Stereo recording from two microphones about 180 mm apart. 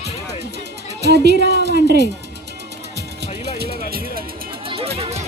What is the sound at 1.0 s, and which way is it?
A woman's voice, 70° right (ahead or behind).